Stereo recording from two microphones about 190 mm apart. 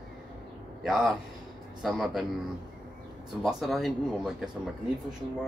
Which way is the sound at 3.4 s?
Centre (ahead or behind).